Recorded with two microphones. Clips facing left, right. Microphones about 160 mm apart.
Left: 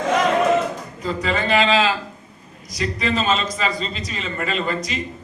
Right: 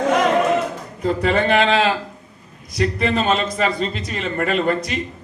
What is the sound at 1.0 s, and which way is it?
A man's voice, 55° right (ahead or behind).